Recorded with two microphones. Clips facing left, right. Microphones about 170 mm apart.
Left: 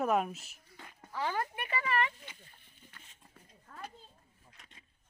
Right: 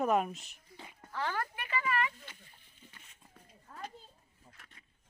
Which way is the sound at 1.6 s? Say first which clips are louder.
Even; 30° left (ahead or behind).